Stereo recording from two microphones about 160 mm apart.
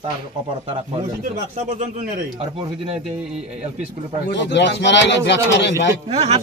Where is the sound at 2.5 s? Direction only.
40° right (ahead or behind).